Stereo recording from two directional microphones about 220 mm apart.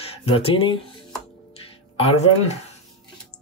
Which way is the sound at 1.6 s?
25° left (ahead or behind).